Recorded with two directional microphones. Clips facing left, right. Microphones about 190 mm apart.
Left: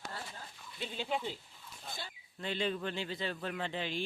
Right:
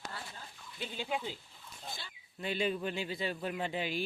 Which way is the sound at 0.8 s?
Centre (ahead or behind).